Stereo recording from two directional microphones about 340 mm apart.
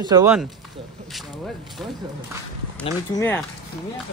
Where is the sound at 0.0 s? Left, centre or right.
Centre.